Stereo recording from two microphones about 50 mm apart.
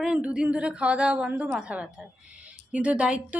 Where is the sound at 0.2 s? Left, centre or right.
Right.